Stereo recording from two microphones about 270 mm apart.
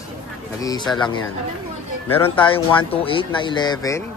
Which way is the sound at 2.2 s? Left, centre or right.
Centre.